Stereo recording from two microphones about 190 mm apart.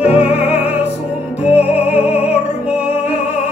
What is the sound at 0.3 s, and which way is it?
Music, 30° left (ahead or behind).